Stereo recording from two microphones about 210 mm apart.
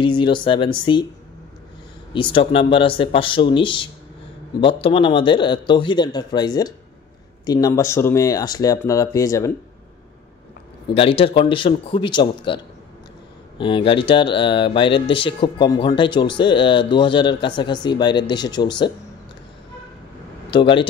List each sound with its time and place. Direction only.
0.0 s speech: 20° left (ahead or behind)
2.1 s speech: 25° left (ahead or behind)
11.0 s speech: 25° left (ahead or behind)
13.6 s speech: 25° left (ahead or behind)
20.4 s speech: 25° left (ahead or behind)